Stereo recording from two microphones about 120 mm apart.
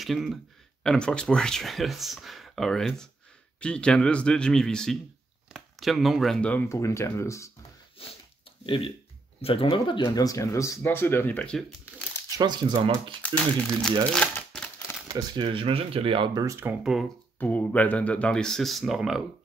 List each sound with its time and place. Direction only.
0.0 s speech: centre (ahead or behind)
6.7 s speech: 25° left (ahead or behind)
8.0 s speech: 50° left (ahead or behind); by 11.6 s 10° left (ahead or behind)
12.4 s speech: 35° right (ahead or behind)
13.2 s speech: 10° left (ahead or behind)
14.1 s crumpling: 10° left (ahead or behind)
15.0 s speech: 30° right (ahead or behind)
15.4 s speech: 50° right (ahead or behind)
16.6 s speech: 20° right (ahead or behind)
17.4 s speech: 15° left (ahead or behind); by 19.2 s 5° right (ahead or behind)